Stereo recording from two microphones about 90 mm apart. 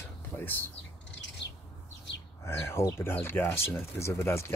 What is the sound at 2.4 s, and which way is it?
Speech, 30° left (ahead or behind).